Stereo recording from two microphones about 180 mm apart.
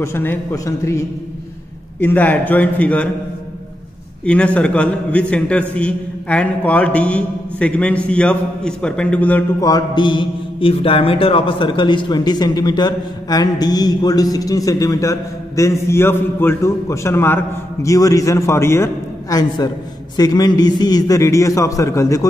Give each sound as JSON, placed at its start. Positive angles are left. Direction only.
{"t": 0.0, "sound": "a man's voice", "side_deg": 10}
{"t": 4.2, "sound": "a man's voice", "side_deg": 5}
{"t": 9.6, "sound": "mantra", "side_deg": 20}